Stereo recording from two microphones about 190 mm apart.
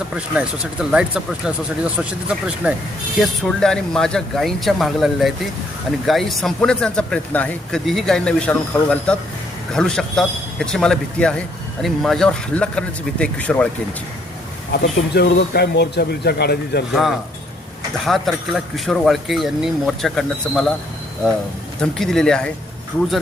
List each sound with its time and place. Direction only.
0.1 s a man's voice: 5° right (ahead or behind)
14.7 s speech: 60° left (ahead or behind)
16.9 s a man's voice: centre (ahead or behind)
21.8 s a man's voice: centre (ahead or behind)